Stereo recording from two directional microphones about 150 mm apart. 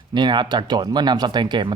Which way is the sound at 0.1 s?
30° right (ahead or behind).